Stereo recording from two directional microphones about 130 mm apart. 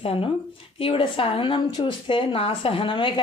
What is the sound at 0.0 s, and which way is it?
Speech, 45° left (ahead or behind).